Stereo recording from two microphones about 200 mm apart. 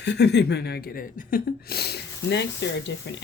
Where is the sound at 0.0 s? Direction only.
60° left (ahead or behind).